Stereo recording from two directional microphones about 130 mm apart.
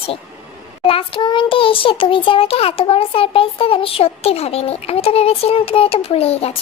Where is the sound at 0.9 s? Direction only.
45° left (ahead or behind).